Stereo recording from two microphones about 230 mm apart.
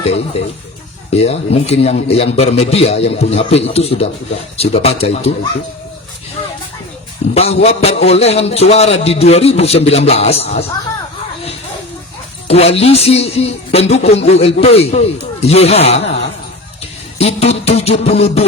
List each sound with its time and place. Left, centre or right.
0.0 s speech: left
7.3 s speech: left
12.5 s speech: left